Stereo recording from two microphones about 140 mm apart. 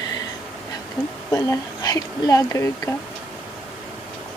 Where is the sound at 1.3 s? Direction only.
20° left (ahead or behind).